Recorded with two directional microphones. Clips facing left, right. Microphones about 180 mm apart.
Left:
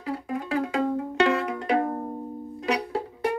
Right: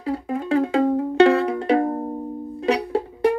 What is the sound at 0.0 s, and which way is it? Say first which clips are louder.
Music: right 5 dB; 30° right (ahead or behind).